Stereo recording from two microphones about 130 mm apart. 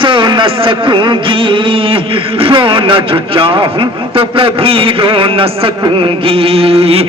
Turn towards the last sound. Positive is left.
turn(degrees=-50)  # may be behind; listen again after turning